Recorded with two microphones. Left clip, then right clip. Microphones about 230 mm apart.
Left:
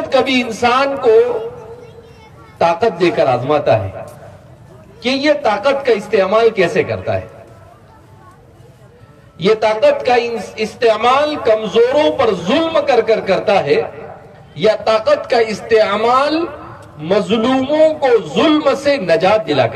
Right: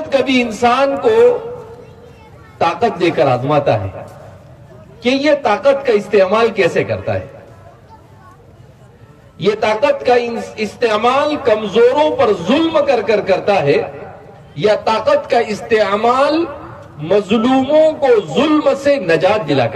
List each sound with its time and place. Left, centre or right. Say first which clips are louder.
0.1 s a man's voice: even; left
2.6 s a man's voice: left 1 dB; left
5.0 s a man's voice: right 1 dB; left
9.4 s a man's voice: left 2 dB; left